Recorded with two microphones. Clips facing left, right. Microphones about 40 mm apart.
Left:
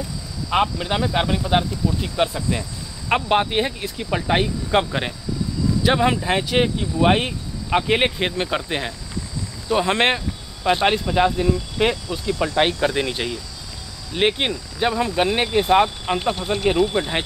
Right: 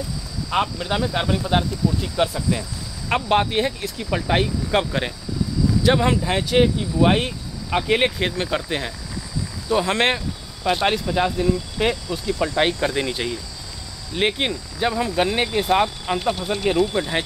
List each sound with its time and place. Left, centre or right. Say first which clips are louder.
0.5 s speech: left 2 dB; centre
11.3 s speech: left 1 dB; left
15.8 s speech: left 2 dB; left